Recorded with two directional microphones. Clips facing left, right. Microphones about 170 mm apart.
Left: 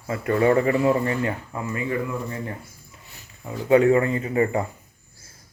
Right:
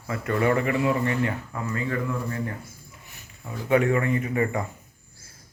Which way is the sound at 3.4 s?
25° left (ahead or behind).